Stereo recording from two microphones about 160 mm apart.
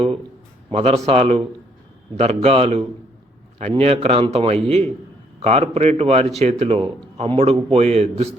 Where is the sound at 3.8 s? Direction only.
40° right (ahead or behind).